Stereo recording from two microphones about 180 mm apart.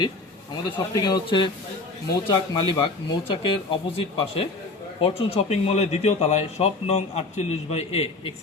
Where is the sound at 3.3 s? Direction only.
30° left (ahead or behind).